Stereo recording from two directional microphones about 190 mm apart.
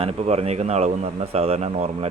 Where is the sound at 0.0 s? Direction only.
35° right (ahead or behind).